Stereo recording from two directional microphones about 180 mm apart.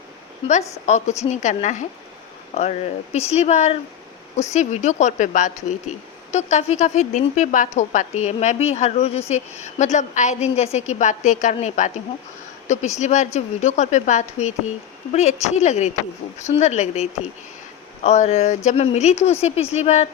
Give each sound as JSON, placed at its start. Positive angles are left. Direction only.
{"t": 0.9, "sound": "a woman's voice", "side_deg": 40}